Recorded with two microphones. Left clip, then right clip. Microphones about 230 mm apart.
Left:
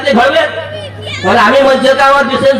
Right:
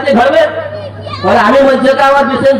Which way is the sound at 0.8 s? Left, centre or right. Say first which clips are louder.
Even; left.